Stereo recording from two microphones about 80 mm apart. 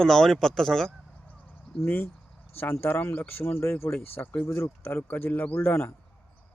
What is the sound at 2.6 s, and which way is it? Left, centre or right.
Speech, left.